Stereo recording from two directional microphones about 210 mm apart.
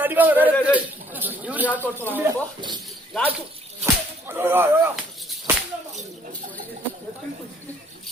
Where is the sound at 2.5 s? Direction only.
20° right (ahead or behind).